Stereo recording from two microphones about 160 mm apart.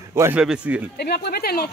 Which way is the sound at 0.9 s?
85° left.